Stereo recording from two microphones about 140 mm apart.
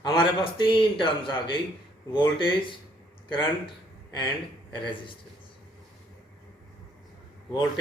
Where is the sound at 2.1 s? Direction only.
35° left (ahead or behind).